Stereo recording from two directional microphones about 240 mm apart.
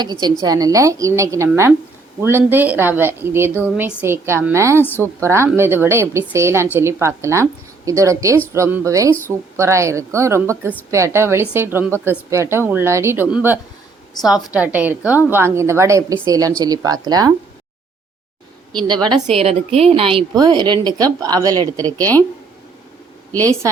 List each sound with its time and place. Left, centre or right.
0.0 s a woman's voice: centre
4.8 s a woman's voice: centre
5.2 s a woman's voice: centre
18.9 s a woman's voice: centre